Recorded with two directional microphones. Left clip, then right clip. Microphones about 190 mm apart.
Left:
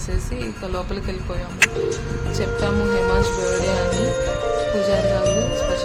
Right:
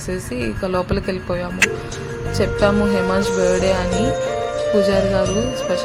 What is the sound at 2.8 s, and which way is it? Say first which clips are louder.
Music: right 1 dB; centre (ahead or behind).